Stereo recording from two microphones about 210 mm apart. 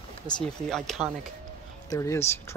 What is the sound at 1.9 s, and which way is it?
Speech, 15° left (ahead or behind).